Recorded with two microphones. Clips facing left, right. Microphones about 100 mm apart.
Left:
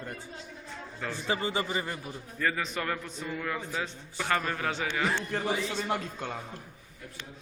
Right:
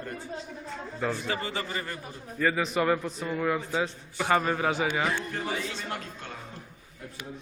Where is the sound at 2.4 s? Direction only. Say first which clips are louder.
Right 6 dB; 10° right (ahead or behind).